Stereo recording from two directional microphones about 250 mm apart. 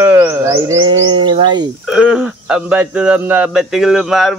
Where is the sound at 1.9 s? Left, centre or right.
Centre.